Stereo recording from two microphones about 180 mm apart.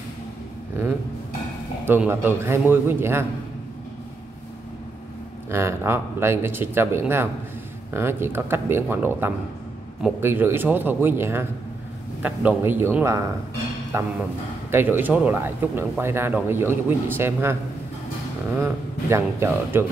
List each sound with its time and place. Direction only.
1.9 s speech: 10° right (ahead or behind)
5.5 s speech: 15° right (ahead or behind)
18.6 s speech: 15° right (ahead or behind)